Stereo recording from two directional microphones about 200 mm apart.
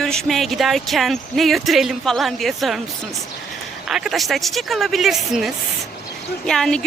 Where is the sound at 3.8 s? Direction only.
Centre (ahead or behind).